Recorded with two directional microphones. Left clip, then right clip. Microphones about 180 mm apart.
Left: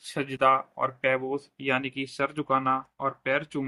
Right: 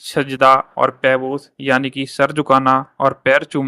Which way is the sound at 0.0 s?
35° right (ahead or behind).